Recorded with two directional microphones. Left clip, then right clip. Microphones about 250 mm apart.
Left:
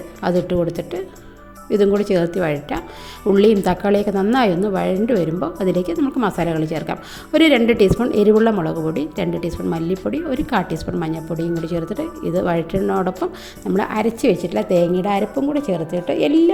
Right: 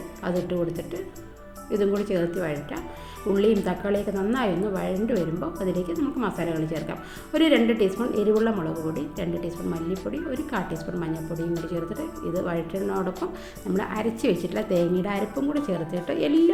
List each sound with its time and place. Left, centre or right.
0.2 s a woman's voice: left